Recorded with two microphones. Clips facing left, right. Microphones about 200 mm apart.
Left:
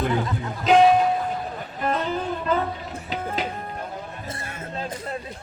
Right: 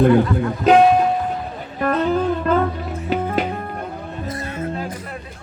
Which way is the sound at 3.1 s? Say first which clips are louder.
Right 8 dB; 55° right (ahead or behind).